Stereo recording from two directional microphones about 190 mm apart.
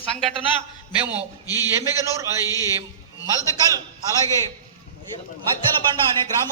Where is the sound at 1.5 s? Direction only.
20° left (ahead or behind).